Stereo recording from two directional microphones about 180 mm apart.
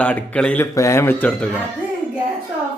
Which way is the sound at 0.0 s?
5° left (ahead or behind).